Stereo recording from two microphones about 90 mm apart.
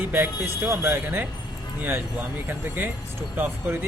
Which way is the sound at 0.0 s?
25° right (ahead or behind).